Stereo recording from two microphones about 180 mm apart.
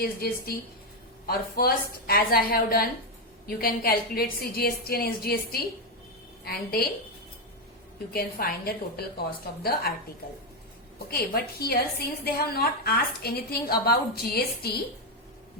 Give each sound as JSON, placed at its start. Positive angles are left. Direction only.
{"t": 0.0, "sound": "a woman's voice", "side_deg": 60}
{"t": 8.1, "sound": "a woman's voice", "side_deg": 55}
{"t": 11.1, "sound": "a woman's voice", "side_deg": 60}